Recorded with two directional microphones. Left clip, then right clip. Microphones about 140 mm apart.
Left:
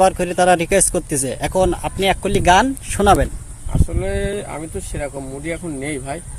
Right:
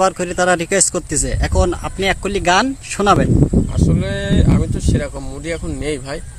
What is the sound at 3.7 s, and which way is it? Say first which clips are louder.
Speech: right 3 dB; 35° right (ahead or behind).